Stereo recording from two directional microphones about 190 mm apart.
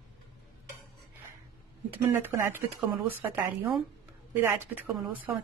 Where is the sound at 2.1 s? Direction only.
10° right (ahead or behind).